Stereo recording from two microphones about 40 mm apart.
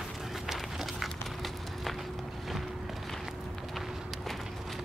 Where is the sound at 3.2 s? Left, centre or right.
Centre.